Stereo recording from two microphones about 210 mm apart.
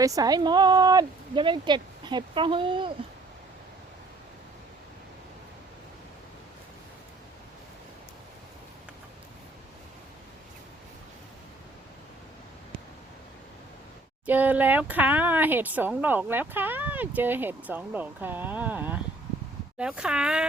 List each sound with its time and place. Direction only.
0.0 s speech: 15° right (ahead or behind)
14.3 s speech: 10° right (ahead or behind)